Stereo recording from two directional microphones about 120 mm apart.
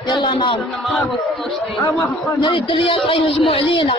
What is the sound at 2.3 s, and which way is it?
A man's voice, 45° left (ahead or behind).